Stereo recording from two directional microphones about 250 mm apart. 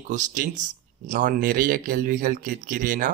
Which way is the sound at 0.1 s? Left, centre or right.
Right.